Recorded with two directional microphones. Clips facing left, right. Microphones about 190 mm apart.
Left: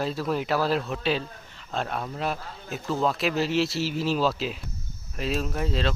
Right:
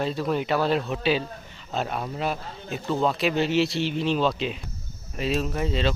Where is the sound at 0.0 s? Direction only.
Centre (ahead or behind).